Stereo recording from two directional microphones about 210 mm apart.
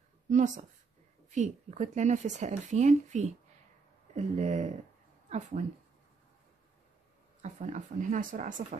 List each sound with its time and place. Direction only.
0.3 s speech: 35° right (ahead or behind)
7.4 s speech: 35° right (ahead or behind)